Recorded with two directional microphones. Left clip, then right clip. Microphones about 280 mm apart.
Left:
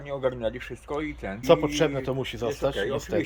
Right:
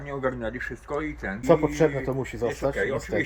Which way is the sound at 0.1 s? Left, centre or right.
Left.